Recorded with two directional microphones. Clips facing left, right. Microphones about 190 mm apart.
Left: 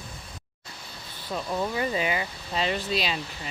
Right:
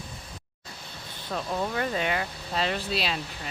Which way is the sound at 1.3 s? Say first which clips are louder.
Left 1 dB; centre (ahead or behind).